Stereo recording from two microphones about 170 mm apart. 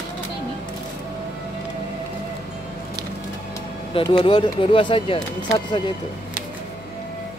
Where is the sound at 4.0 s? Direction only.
30° left (ahead or behind).